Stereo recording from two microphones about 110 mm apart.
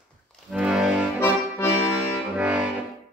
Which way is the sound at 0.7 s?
5° right (ahead or behind).